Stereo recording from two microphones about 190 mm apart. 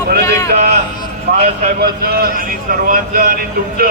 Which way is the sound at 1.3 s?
40° right (ahead or behind).